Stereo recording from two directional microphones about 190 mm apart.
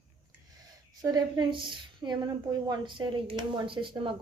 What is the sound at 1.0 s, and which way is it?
Speech, 20° right (ahead or behind).